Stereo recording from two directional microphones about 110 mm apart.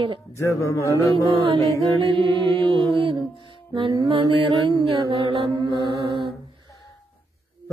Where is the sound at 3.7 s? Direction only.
45° right (ahead or behind).